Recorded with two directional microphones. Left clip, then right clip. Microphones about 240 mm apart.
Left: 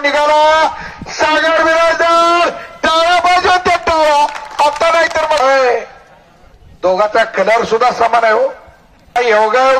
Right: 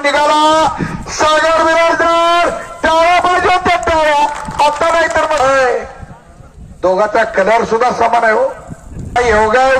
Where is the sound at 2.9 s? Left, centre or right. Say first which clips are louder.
Even; centre.